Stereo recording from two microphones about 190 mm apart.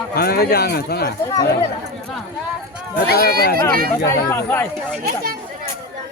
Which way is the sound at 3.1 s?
50° left (ahead or behind).